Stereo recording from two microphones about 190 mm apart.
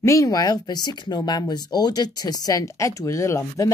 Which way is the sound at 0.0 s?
15° left (ahead or behind).